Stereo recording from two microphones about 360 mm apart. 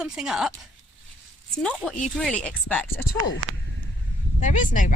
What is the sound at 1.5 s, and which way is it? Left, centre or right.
Speech, centre.